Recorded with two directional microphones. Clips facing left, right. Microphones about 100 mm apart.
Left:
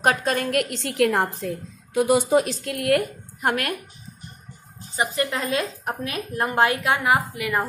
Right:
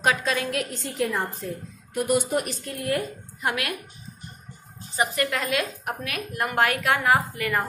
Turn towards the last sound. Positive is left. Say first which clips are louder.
# even
turn(degrees=15)  # may be behind; listen again after turning